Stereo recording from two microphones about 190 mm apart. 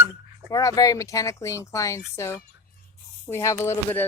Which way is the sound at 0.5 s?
20° left (ahead or behind).